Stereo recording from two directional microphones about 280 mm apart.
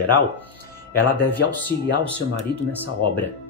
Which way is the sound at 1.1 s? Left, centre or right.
Centre.